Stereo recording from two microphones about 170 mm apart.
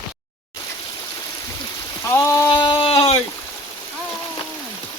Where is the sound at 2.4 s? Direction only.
30° left (ahead or behind).